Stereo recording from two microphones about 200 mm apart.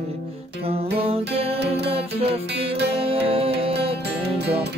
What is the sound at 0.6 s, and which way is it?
Music, 30° right (ahead or behind).